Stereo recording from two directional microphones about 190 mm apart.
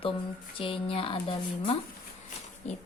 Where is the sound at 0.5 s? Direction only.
25° left (ahead or behind).